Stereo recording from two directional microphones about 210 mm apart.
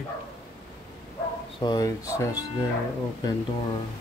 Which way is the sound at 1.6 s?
20° left (ahead or behind).